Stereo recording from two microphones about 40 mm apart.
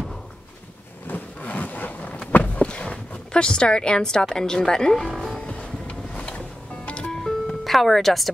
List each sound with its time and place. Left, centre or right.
1.0 s a sound: left
2.3 s speech: left; by 5.1 s centre
5.1 s music: centre
5.4 s music: left
7.1 s music: centre